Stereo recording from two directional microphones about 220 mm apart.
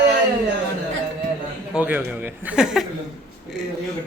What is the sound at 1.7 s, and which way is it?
A man's voice, 5° right (ahead or behind).